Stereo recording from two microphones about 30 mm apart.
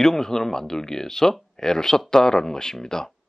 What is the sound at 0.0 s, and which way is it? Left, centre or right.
Speech, centre.